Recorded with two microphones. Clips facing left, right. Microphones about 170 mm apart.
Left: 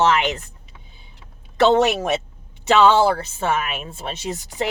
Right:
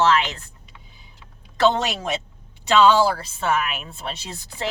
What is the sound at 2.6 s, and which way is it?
Speech, 20° left (ahead or behind).